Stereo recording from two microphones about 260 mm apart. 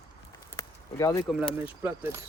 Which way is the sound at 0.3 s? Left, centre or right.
Centre.